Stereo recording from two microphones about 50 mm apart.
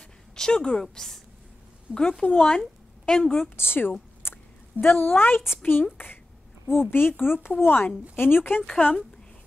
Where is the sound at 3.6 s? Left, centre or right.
Left.